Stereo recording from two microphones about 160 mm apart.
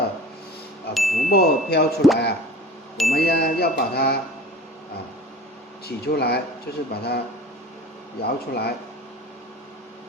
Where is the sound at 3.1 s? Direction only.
80° left.